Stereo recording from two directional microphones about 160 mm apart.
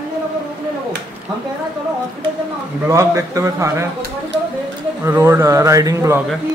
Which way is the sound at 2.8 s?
20° right (ahead or behind).